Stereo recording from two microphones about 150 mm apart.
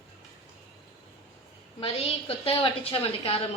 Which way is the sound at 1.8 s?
40° left (ahead or behind).